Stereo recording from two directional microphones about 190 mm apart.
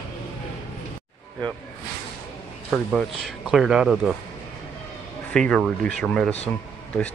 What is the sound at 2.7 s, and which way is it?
Speech, centre (ahead or behind).